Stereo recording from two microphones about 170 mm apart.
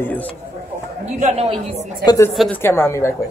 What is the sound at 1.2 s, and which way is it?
Speech, 35° right (ahead or behind).